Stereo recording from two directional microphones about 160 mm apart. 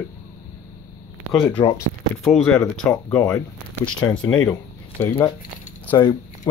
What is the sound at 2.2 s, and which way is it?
Speech, 5° left (ahead or behind).